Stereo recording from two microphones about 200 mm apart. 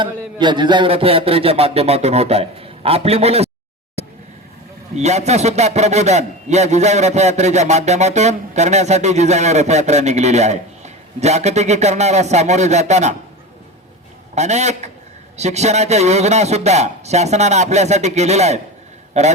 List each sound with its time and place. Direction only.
0.0 s a man's voice: 25° right (ahead or behind)
4.9 s a man's voice: 35° right (ahead or behind)
14.3 s a man's voice: 35° right (ahead or behind)